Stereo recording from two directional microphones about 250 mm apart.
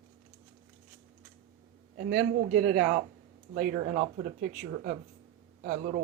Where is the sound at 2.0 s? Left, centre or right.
Right.